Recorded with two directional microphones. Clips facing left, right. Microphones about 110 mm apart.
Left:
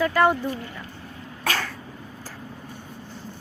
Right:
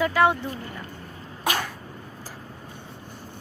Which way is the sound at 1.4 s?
15° right (ahead or behind).